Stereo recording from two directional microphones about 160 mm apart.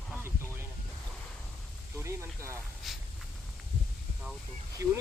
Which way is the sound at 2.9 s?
Centre (ahead or behind).